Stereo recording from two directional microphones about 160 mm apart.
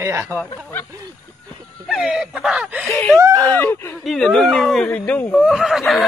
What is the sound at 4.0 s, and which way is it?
Speech, centre (ahead or behind).